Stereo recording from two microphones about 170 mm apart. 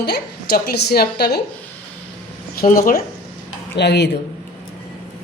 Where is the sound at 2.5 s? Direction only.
55° left (ahead or behind).